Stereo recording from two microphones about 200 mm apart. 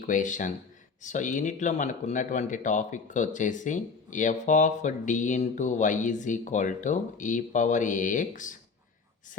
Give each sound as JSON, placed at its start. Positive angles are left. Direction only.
{"t": 0.0, "sound": "speech", "side_deg": 40}